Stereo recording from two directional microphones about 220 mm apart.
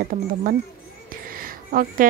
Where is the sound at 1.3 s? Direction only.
40° right (ahead or behind).